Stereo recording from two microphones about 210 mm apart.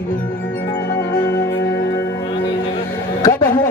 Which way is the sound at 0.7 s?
20° left (ahead or behind).